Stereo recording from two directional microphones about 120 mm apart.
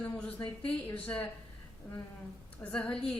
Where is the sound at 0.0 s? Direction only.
20° left (ahead or behind).